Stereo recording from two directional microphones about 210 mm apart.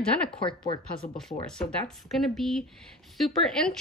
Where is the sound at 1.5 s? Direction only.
5° left (ahead or behind).